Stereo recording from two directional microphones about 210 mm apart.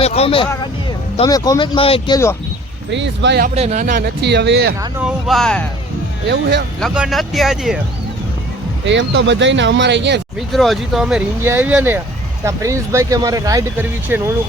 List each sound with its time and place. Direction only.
0.0 s speech: 30° left (ahead or behind)
2.9 s speech: 55° right (ahead or behind)
3.5 s speech: 30° right (ahead or behind); by 4.7 s 55° right (ahead or behind)
4.9 s speech: 5° right (ahead or behind)
6.2 s speech: 55° right (ahead or behind)
6.7 s speech: centre (ahead or behind)
8.8 s speech: 60° right (ahead or behind)
10.5 s speech: centre (ahead or behind)